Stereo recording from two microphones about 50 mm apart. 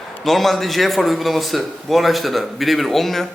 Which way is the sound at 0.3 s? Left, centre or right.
Centre.